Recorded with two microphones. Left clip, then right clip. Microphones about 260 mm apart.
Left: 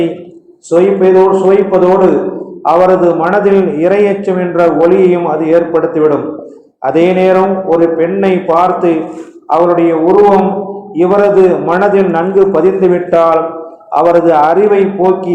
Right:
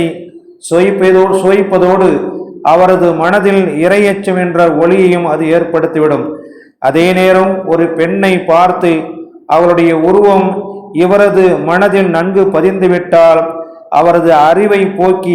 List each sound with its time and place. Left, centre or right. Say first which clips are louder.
0.7 s a man's voice: even; right
10.9 s a man's voice: even; right